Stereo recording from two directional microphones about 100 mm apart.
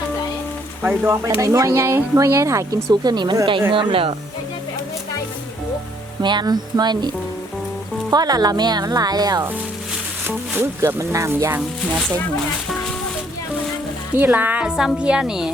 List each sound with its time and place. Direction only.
0.8 s speech: 20° right (ahead or behind)
1.4 s speech: 30° right (ahead or behind); by 4.1 s 60° right (ahead or behind)
6.2 s speech: 45° right (ahead or behind)
8.1 s speech: 40° right (ahead or behind)
10.2 s speech: 25° right (ahead or behind)
14.2 s a woman's voice: 15° right (ahead or behind)